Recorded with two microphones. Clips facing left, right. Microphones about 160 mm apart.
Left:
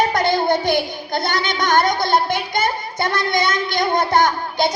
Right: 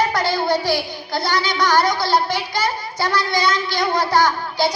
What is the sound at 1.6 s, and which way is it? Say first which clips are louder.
A child's voice: left 1 dB; 20° left (ahead or behind).